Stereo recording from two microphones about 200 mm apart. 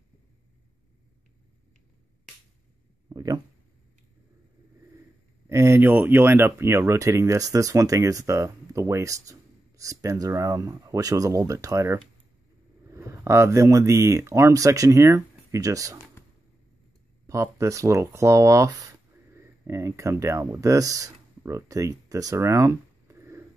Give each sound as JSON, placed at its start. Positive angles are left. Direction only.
{"t": 3.1, "sound": "a sound", "side_deg": -20}
{"t": 5.5, "sound": "speech", "side_deg": -15}
{"t": 17.3, "sound": "speech", "side_deg": -15}